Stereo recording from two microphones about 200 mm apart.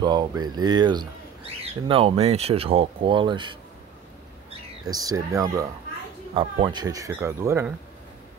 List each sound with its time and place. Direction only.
0.0 s speech: 20° right (ahead or behind)
4.8 s speech: 20° right (ahead or behind)